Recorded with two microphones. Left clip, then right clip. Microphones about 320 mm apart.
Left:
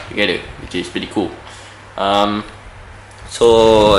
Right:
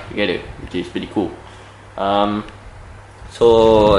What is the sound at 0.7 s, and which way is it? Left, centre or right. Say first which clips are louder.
Speech: left 2 dB; centre.